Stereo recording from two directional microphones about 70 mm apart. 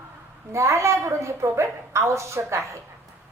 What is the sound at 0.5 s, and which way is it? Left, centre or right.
A woman's voice, right.